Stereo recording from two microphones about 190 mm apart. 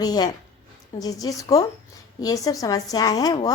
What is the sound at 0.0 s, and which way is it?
A woman's voice, 20° left (ahead or behind).